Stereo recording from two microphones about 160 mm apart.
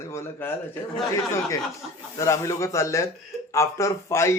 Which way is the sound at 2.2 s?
20° left (ahead or behind).